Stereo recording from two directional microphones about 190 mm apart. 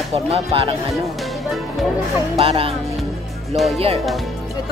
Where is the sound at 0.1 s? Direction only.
30° right (ahead or behind).